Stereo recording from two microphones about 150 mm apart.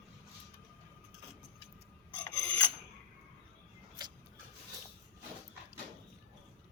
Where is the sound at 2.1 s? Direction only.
15° left (ahead or behind).